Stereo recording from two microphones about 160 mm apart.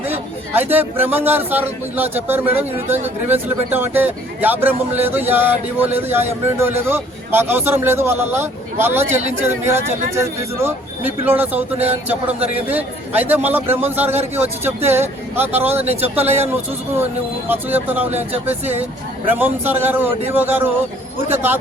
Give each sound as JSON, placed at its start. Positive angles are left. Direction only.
{"t": 0.0, "sound": "speech", "side_deg": -10}
{"t": 18.1, "sound": "speech", "side_deg": -40}
{"t": 19.3, "sound": "speech", "side_deg": -10}